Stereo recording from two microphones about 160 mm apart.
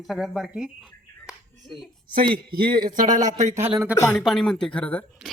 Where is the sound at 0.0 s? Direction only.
Centre (ahead or behind).